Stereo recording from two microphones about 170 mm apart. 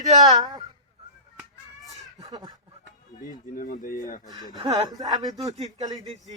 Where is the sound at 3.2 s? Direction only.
55° left (ahead or behind).